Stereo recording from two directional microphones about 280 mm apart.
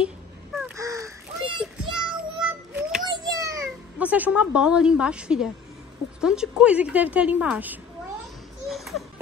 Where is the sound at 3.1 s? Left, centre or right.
Centre.